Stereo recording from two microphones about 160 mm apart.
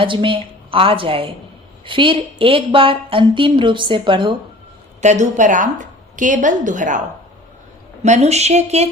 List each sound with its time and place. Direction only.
0.0 s a woman's voice: 30° right (ahead or behind)
4.9 s a woman's voice: 45° right (ahead or behind)
8.0 s a woman's voice: 45° right (ahead or behind)